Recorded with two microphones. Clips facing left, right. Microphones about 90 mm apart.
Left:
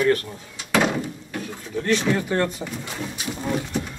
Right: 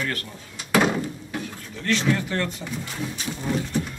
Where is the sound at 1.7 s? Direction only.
15° left (ahead or behind).